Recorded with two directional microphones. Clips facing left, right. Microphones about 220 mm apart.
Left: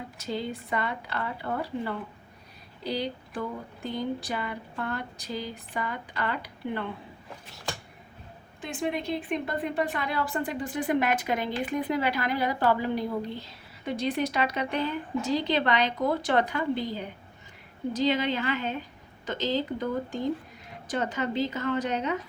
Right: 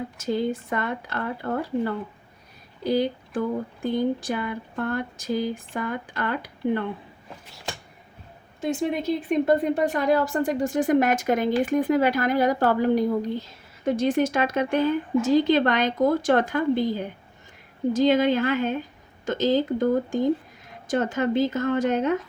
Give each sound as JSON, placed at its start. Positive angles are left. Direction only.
{"t": 0.2, "sound": "speech", "side_deg": -50}
{"t": 8.6, "sound": "speech", "side_deg": -40}